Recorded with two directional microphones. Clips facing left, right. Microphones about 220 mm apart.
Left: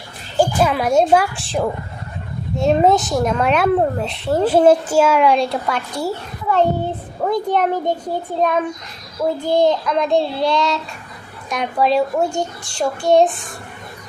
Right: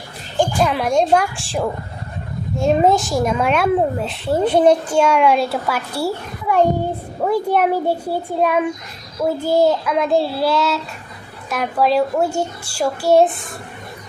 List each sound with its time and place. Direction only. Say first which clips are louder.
0.3 s speech: left 1 dB; 5° left (ahead or behind)